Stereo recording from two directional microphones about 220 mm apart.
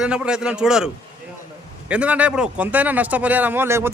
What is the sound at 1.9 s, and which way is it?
Speech, 5° right (ahead or behind).